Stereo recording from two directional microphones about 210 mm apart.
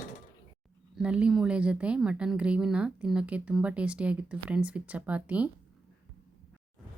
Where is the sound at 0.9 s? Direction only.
5° right (ahead or behind).